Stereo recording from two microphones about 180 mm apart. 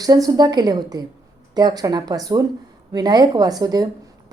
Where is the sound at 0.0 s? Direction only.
20° right (ahead or behind).